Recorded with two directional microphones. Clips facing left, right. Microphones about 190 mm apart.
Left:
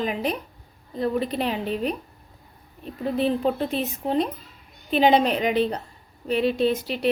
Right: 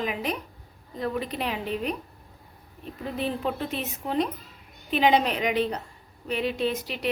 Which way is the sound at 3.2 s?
35° left (ahead or behind).